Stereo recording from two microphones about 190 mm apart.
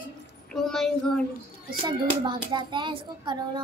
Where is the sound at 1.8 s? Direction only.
25° right (ahead or behind).